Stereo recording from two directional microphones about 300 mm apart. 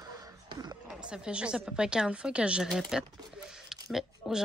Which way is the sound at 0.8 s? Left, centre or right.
Centre.